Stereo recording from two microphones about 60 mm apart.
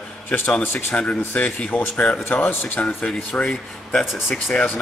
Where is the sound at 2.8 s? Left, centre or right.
Centre.